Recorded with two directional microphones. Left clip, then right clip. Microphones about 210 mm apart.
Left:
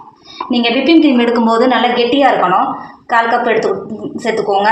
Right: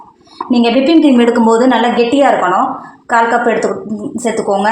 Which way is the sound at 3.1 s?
45° right (ahead or behind).